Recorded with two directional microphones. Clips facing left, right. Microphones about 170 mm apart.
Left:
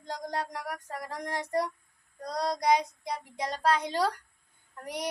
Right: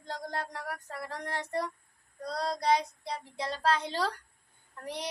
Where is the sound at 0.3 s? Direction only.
15° left (ahead or behind).